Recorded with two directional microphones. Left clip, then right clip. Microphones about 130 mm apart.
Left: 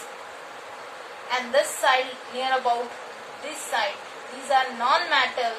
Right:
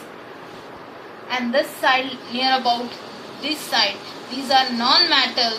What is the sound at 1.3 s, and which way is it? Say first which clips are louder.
A woman's voice: right 2 dB; 15° left (ahead or behind).